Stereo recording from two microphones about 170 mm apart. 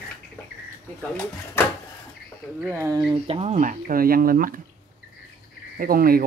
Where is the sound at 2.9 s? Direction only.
35° right (ahead or behind); by 4.6 s 55° right (ahead or behind).